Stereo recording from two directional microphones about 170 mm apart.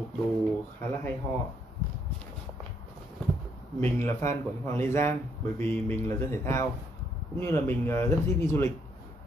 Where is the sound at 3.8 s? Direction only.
15° left (ahead or behind).